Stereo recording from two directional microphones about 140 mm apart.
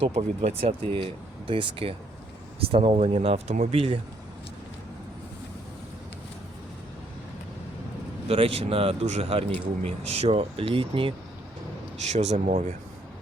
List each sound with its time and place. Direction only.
0.0 s speech: 50° right (ahead or behind)
8.3 s speech: 45° right (ahead or behind)
12.0 s speech: 50° right (ahead or behind)